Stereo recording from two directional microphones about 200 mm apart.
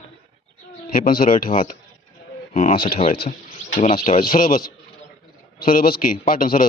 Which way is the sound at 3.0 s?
25° left (ahead or behind).